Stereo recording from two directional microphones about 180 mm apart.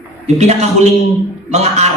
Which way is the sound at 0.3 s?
40° right (ahead or behind).